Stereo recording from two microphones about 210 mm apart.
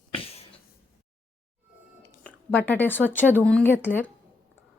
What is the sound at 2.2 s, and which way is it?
A woman's voice, 10° left (ahead or behind).